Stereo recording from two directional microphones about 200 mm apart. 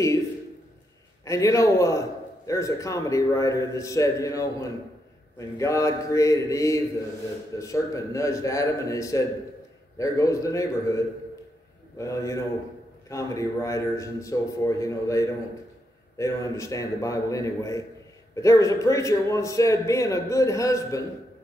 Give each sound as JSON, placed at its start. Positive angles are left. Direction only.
{"t": 1.2, "sound": "a man's voice", "side_deg": 15}
{"t": 12.0, "sound": "a man's voice", "side_deg": 15}